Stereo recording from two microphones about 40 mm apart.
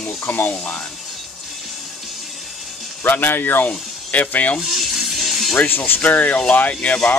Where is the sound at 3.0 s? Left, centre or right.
Left.